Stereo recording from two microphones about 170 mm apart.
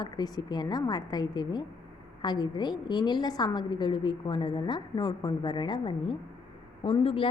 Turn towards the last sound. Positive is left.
turn(degrees=30)  # may be behind; listen again after turning